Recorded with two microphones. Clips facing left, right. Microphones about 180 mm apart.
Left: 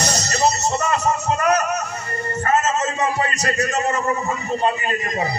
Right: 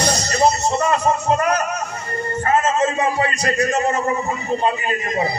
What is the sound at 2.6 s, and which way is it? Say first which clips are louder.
A man's voice: right 3 dB; 30° right (ahead or behind).